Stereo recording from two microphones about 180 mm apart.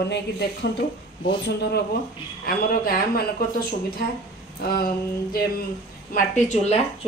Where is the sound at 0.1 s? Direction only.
70° left (ahead or behind).